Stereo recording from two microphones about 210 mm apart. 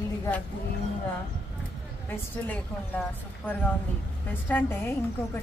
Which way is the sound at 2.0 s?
10° left (ahead or behind).